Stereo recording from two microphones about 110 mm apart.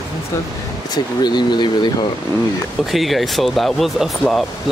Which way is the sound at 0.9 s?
40° left (ahead or behind).